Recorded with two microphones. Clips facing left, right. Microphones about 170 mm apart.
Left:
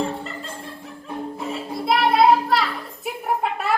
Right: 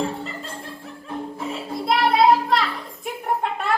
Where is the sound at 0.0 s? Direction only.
Centre (ahead or behind).